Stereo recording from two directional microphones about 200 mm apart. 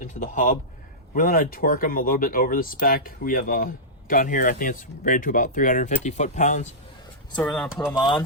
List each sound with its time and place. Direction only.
0.0 s speech: 40° left (ahead or behind)
7.4 s speech: centre (ahead or behind)
7.9 s speech: 20° left (ahead or behind)